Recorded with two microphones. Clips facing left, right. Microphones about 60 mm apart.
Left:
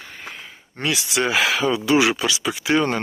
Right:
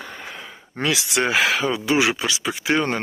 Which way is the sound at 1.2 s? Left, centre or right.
Right.